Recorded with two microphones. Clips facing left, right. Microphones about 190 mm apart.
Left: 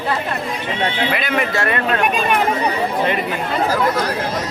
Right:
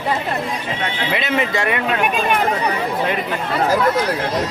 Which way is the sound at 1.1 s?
25° right (ahead or behind).